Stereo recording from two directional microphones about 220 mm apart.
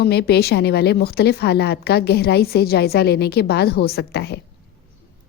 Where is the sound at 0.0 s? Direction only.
45° left (ahead or behind).